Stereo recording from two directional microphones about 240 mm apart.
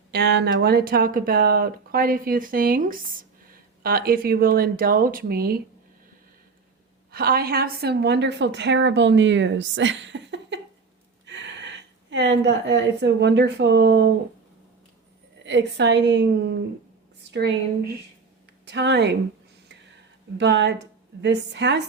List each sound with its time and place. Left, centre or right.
0.1 s speech: right
7.1 s a woman's voice: right
15.4 s a woman's voice: right
18.6 s speech: right
20.4 s a woman's voice: right